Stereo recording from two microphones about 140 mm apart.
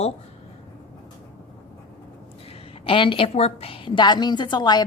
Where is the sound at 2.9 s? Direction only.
40° left (ahead or behind).